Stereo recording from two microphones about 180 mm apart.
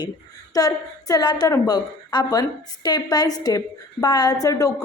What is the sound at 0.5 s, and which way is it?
A woman's voice, 20° left (ahead or behind).